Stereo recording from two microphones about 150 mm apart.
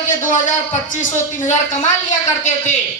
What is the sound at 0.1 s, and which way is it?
A woman's voice, 55° left (ahead or behind).